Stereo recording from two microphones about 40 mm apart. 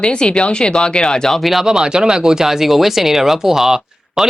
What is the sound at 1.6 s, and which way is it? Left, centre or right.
Speech, centre.